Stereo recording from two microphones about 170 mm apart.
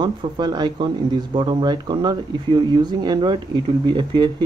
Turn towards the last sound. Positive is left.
turn(degrees=-30)  # may be behind; listen again after turning